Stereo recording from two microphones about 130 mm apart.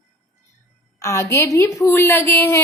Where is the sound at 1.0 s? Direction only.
25° left (ahead or behind).